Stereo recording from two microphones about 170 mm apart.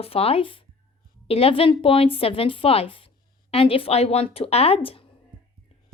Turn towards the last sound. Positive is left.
turn(degrees=30)  # may be behind; listen again after turning